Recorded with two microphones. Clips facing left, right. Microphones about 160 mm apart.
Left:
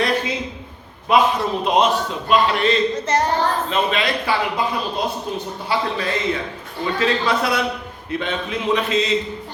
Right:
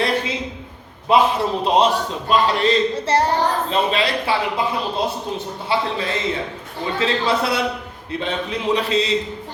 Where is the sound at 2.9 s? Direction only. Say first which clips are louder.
Right 1 dB; 30° right (ahead or behind).